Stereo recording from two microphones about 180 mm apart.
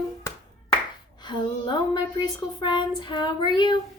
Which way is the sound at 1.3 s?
25° left (ahead or behind).